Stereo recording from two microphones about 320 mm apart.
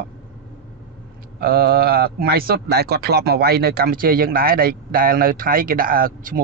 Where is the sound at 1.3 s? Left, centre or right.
Right.